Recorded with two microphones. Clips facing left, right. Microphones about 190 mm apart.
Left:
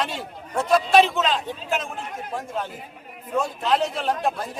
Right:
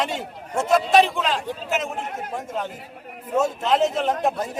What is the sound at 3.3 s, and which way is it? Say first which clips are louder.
Speech: right 2 dB; 20° right (ahead or behind).